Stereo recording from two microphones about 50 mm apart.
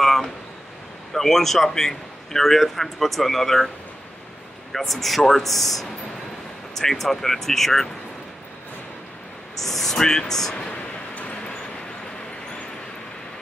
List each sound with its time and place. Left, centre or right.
0.0 s a sound: centre
1.1 s a man's voice: centre
4.7 s a man's voice: centre
9.6 s speech: centre
11.1 s vehicle: left